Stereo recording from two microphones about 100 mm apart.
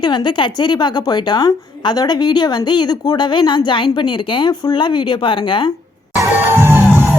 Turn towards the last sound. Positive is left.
turn(degrees=-20)  # may be behind; listen again after turning